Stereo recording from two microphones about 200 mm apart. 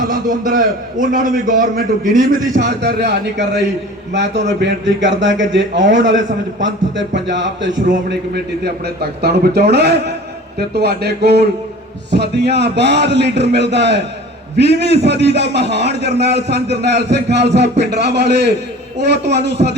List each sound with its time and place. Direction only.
0.1 s a man's voice: 40° right (ahead or behind)
2.6 s a man's voice: 60° right (ahead or behind)
8.6 s a man's voice: 55° right (ahead or behind)